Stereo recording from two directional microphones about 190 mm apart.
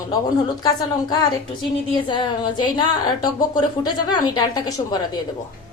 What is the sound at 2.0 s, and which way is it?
Speech, 25° left (ahead or behind).